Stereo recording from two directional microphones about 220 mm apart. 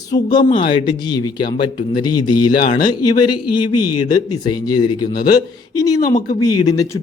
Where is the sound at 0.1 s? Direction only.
20° left (ahead or behind).